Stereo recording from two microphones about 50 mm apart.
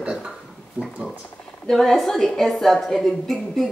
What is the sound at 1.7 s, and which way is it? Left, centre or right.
A woman's voice, centre.